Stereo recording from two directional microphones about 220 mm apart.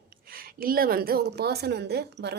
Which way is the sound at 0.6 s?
40° right (ahead or behind).